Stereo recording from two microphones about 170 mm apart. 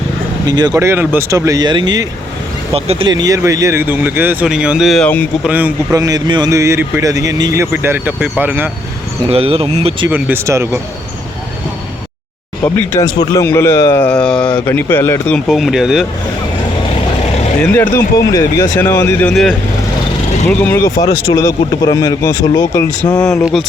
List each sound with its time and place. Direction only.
0.4 s speech: 25° right (ahead or behind)
2.7 s speech: 35° right (ahead or behind)
3.1 s speech: 20° right (ahead or behind); by 5.2 s 5° left (ahead or behind)
5.4 s speech: 10° right (ahead or behind)
9.2 s speech: 35° right (ahead or behind)
10.1 s speech: 10° right (ahead or behind)
12.6 s speech: 15° left (ahead or behind)
14.1 s mantra: 5° left (ahead or behind)
14.7 s speech: 10° left (ahead or behind)
15.4 s speech: centre (ahead or behind)
17.6 s speech: 15° left (ahead or behind)
19.3 s speech: centre (ahead or behind); by 22.9 s 20° left (ahead or behind)